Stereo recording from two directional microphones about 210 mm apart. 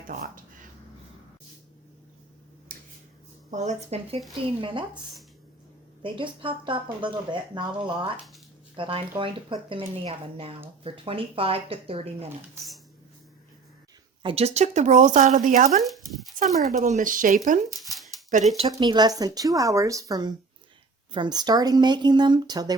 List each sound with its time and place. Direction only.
0.1 s speech: 40° right (ahead or behind)
2.7 s a sound: 45° right (ahead or behind)
3.5 s speech: 35° right (ahead or behind)
6.0 s speech: 25° right (ahead or behind)
14.2 s speech: 25° right (ahead or behind)
15.8 s speech: centre (ahead or behind)
16.4 s speech: 35° right (ahead or behind)
17.7 s shuffling cards: centre (ahead or behind)
18.5 s speech: 25° right (ahead or behind)